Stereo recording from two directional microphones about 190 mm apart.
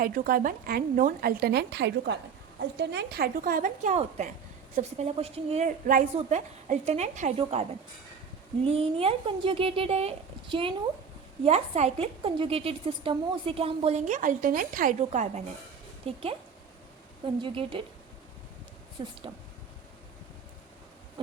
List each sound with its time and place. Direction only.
0.0 s a woman's voice: 50° right (ahead or behind); by 16.2 s 30° right (ahead or behind)
17.2 s speech: 25° right (ahead or behind)
19.0 s speech: 25° right (ahead or behind)